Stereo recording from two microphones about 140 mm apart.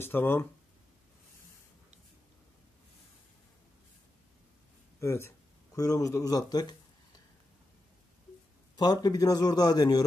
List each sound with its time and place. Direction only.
0.0 s speech: 15° left (ahead or behind)
5.0 s a man's voice: 20° left (ahead or behind)
8.7 s a man's voice: 30° left (ahead or behind)